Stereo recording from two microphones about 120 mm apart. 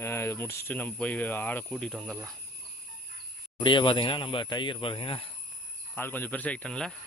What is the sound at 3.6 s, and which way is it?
Speech, 40° left (ahead or behind).